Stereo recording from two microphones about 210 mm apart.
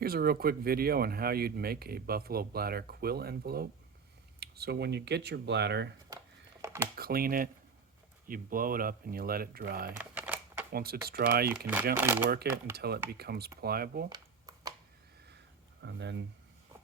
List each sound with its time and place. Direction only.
0.0 s speech: 45° right (ahead or behind)
6.9 s speech: 45° right (ahead or behind)
10.0 s typewriter: 5° right (ahead or behind)
10.7 s speech: 45° right (ahead or behind)
11.5 s speech: 10° right (ahead or behind)
12.7 s speech: 50° right (ahead or behind)
14.1 s a sound: 20° right (ahead or behind)
15.8 s speech: 55° right (ahead or behind)